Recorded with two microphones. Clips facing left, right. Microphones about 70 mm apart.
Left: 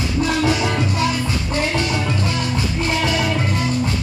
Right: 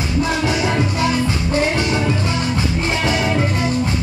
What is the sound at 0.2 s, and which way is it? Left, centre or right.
Music, right.